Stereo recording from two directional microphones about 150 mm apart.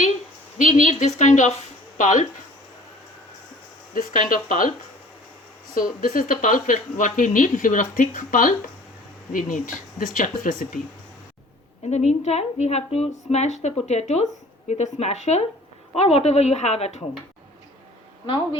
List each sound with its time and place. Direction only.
0.6 s a woman's voice: 55° left (ahead or behind)
3.9 s speech: 65° left (ahead or behind)
5.7 s speech: 65° left (ahead or behind)
11.9 s a woman's voice: 50° left (ahead or behind)